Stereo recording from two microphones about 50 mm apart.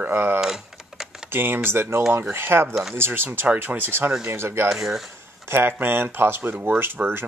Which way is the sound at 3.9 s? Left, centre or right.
Right.